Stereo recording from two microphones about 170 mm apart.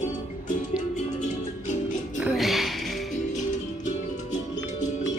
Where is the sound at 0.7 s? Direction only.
45° left (ahead or behind).